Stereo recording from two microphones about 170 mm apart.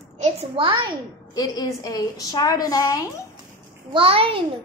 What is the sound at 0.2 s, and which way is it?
Speech, 35° right (ahead or behind).